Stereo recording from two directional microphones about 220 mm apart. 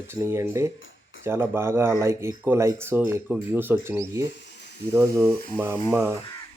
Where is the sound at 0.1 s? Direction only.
10° right (ahead or behind).